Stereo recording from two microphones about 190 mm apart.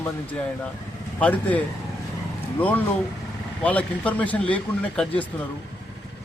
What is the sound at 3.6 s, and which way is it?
Speech, 5° left (ahead or behind).